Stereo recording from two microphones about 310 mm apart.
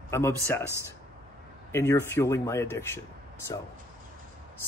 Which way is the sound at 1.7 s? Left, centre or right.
Centre.